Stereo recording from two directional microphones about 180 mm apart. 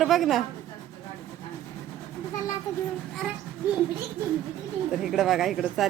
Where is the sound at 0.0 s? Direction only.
Centre (ahead or behind).